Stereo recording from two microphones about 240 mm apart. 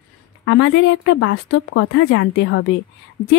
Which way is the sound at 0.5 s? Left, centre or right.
Left.